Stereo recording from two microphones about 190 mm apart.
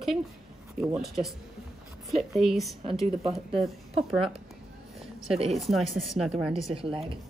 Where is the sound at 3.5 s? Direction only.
30° right (ahead or behind).